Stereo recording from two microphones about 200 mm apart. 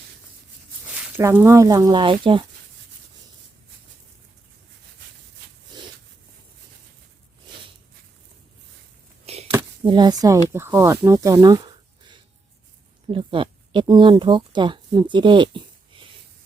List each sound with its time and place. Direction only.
0.9 s speech: 10° right (ahead or behind); by 2.4 s 25° right (ahead or behind)
9.2 s a sound: 30° right (ahead or behind)
9.8 s speech: 25° right (ahead or behind)